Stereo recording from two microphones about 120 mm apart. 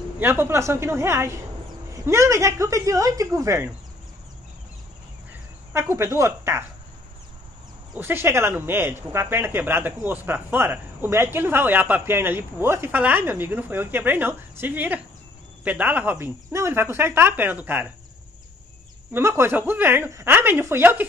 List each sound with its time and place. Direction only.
0.2 s a woman's voice: 20° right (ahead or behind)
5.7 s a woman's voice: 20° right (ahead or behind)
7.9 s a woman's voice: 20° right (ahead or behind)
19.1 s speech: 20° right (ahead or behind)